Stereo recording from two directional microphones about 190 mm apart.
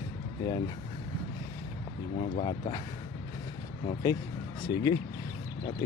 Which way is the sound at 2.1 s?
30° left (ahead or behind).